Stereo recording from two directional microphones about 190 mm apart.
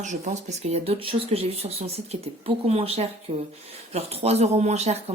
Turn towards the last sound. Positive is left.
turn(degrees=-35)  # may be behind; listen again after turning